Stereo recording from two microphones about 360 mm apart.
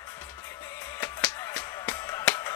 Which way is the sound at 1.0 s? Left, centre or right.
Centre.